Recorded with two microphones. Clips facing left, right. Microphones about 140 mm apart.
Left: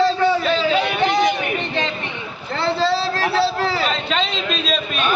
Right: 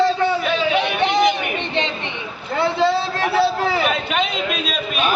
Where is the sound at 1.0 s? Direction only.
20° right (ahead or behind).